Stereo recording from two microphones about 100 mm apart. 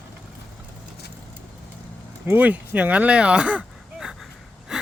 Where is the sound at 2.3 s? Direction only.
15° right (ahead or behind).